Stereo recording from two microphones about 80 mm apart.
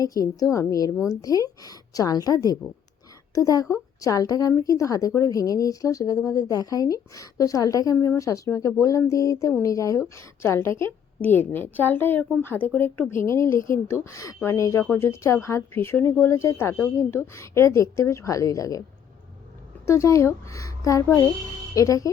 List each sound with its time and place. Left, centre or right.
0.0 s a woman's voice: left
10.2 s a woman's voice: left
11.2 s a woman's voice: left
19.8 s a woman's voice: left